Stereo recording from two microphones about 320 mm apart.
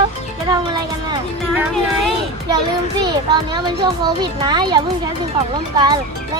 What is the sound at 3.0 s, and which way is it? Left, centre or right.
A child's voice, centre.